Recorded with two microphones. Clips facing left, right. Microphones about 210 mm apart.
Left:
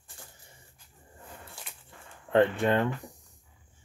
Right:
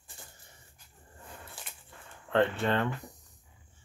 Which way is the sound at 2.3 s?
15° left (ahead or behind).